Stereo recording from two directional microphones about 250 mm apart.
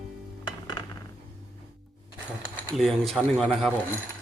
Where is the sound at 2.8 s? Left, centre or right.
Centre.